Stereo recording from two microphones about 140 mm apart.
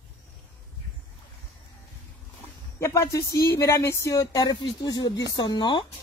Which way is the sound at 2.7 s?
20° left (ahead or behind).